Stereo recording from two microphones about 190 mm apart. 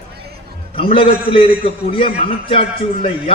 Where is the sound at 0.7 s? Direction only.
30° left (ahead or behind).